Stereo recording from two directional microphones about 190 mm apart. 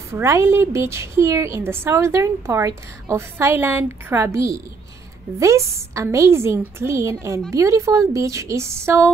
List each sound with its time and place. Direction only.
0.1 s a woman's voice: 15° right (ahead or behind)